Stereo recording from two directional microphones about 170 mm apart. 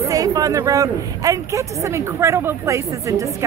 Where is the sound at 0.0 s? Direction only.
20° right (ahead or behind).